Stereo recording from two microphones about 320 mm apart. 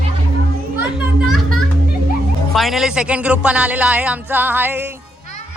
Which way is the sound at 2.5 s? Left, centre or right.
Centre.